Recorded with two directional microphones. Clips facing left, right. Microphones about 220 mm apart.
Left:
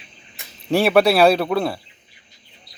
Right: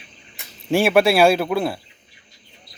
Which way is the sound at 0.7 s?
Centre (ahead or behind).